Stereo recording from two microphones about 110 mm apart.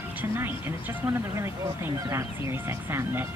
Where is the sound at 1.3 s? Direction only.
25° right (ahead or behind).